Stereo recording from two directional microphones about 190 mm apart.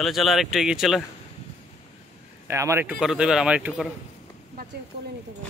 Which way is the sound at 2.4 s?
15° right (ahead or behind).